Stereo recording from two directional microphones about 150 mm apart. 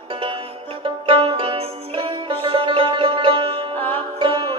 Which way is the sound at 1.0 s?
35° right (ahead or behind).